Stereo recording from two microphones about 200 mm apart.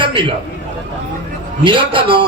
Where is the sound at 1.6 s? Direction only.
25° right (ahead or behind).